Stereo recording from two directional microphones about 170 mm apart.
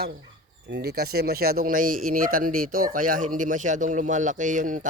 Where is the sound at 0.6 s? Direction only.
75° right (ahead or behind).